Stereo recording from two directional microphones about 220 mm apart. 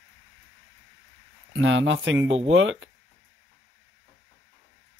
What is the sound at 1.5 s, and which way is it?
Speech, 60° right (ahead or behind).